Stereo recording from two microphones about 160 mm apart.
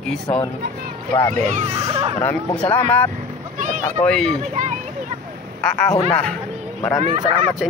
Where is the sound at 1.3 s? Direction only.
50° right (ahead or behind).